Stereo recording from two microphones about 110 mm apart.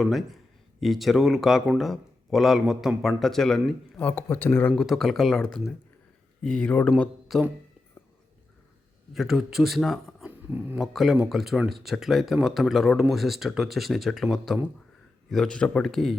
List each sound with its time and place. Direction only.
0.0 s speech: centre (ahead or behind)
3.9 s speech: 20° left (ahead or behind)
4.8 s speech: centre (ahead or behind)
9.1 s speech: 5° right (ahead or behind)
10.2 s a sound: 15° right (ahead or behind)
10.8 s speech: centre (ahead or behind)